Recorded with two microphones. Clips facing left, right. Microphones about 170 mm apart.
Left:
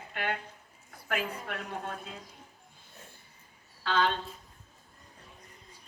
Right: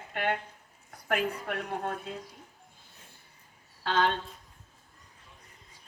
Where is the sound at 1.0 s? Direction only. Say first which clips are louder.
Right 4 dB; 50° right (ahead or behind).